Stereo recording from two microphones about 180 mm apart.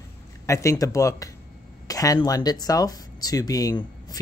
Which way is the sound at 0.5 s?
15° left (ahead or behind).